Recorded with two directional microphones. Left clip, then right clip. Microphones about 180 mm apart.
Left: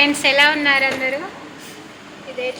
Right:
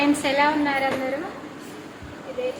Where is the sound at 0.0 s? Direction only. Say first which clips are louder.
Left 6 dB; 5° right (ahead or behind).